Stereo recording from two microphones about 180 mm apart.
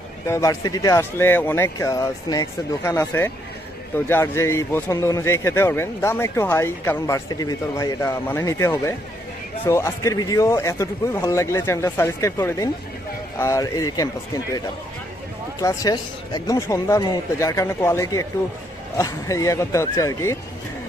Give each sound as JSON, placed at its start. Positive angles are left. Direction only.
{"t": 0.3, "sound": "a man's voice", "side_deg": 20}
{"t": 15.6, "sound": "a man's voice", "side_deg": 20}